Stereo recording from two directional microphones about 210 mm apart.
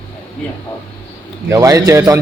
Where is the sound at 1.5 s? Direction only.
15° right (ahead or behind).